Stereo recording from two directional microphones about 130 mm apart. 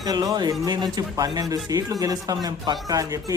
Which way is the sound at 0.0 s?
30° right (ahead or behind).